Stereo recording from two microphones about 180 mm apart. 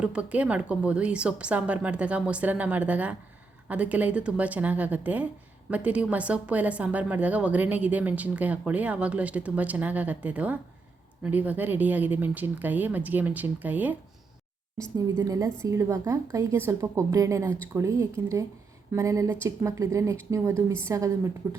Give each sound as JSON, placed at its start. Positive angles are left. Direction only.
{"t": 0.0, "sound": "a woman's voice", "side_deg": -5}
{"t": 14.9, "sound": "a woman's voice", "side_deg": -20}